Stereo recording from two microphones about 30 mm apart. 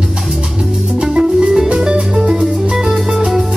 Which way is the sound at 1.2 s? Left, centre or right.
Right.